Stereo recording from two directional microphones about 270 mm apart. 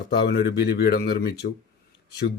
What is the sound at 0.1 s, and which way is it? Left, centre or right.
Speech, left.